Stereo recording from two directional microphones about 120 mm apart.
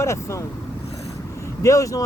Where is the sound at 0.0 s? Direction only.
25° left (ahead or behind).